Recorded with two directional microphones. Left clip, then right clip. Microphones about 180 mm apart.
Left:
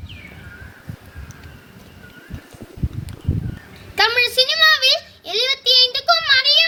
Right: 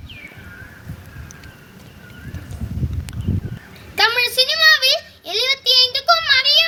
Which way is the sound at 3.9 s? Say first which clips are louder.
Even; 10° left (ahead or behind).